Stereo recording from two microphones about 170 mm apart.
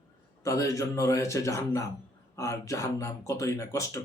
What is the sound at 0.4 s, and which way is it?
Speech, 20° left (ahead or behind).